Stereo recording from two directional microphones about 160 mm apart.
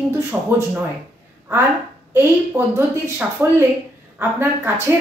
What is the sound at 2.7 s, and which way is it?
Speech, 15° right (ahead or behind).